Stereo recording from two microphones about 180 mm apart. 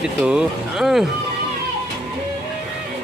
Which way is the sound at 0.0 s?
5° right (ahead or behind).